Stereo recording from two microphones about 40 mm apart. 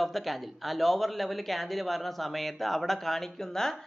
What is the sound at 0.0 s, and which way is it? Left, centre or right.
Speech, centre.